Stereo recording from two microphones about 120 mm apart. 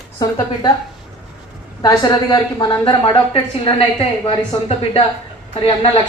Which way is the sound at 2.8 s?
45° left (ahead or behind).